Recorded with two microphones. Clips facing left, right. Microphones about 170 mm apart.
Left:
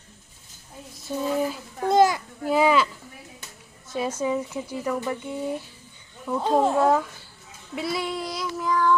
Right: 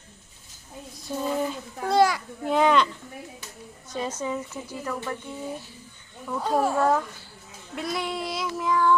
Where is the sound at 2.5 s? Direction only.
5° left (ahead or behind).